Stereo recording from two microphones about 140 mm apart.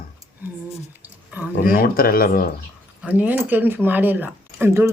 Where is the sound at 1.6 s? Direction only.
90° left.